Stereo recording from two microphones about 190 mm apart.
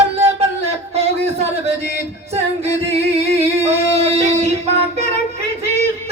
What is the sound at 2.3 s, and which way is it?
Singing, 35° right (ahead or behind).